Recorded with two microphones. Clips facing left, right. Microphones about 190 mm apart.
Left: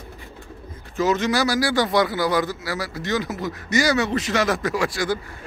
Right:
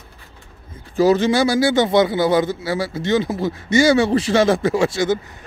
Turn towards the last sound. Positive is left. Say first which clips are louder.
# right 5 dB
turn(degrees=-25)  # may be behind; listen again after turning